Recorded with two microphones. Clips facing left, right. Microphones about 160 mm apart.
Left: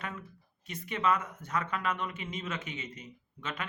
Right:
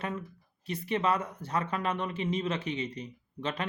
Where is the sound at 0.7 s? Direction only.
30° right (ahead or behind).